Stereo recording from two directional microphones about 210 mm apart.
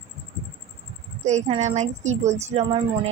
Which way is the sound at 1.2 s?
35° right (ahead or behind).